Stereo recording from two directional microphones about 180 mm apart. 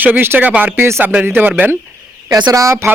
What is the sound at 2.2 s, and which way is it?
Speech, 20° right (ahead or behind).